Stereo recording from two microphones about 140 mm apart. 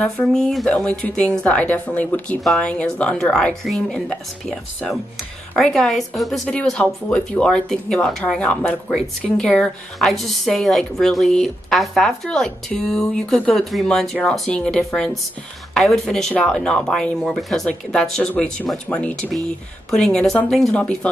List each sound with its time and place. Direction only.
0.0 s a woman's voice: 5° left (ahead or behind)